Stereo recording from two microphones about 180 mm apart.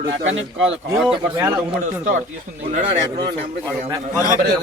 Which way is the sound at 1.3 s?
20° right (ahead or behind).